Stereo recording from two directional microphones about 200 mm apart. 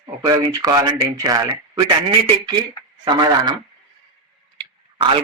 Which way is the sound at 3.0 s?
20° right (ahead or behind).